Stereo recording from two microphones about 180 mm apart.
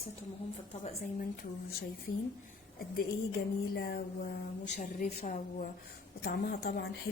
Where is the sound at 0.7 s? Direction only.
35° left (ahead or behind).